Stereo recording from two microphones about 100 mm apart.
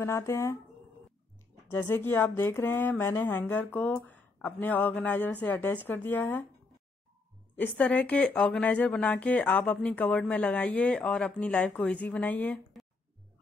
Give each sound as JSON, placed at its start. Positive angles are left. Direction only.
{"t": 0.0, "sound": "speech", "side_deg": 30}
{"t": 1.7, "sound": "speech", "side_deg": 20}
{"t": 7.5, "sound": "speech", "side_deg": 15}